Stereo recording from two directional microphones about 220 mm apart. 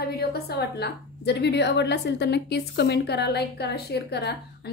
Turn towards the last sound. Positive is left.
turn(degrees=50)  # may be behind; listen again after turning